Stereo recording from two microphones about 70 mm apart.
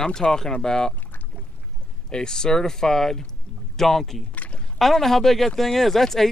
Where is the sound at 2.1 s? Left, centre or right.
Centre.